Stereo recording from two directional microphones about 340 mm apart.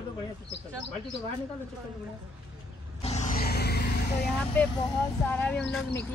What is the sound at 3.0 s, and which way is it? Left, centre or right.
Vehicle, centre.